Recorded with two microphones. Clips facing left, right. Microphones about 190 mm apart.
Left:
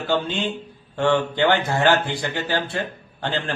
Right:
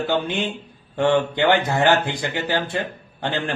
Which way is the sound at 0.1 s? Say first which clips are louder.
Even; 15° right (ahead or behind).